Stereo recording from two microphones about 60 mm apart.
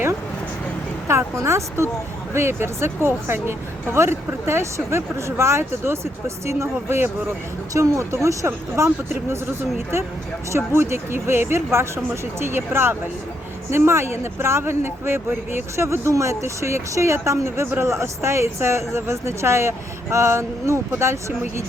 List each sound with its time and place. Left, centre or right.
1.0 s speech: right
7.7 s speech: right
8.4 s speech: right
10.7 s speech: right